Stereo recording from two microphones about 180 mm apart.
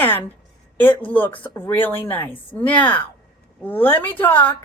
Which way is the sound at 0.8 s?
10° left (ahead or behind).